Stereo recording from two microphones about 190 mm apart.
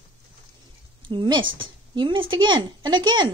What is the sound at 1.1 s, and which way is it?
A woman's voice, 25° right (ahead or behind).